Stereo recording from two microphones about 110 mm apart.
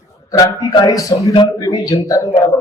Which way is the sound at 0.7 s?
40° left (ahead or behind).